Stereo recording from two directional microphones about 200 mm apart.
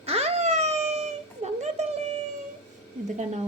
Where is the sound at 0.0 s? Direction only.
30° right (ahead or behind).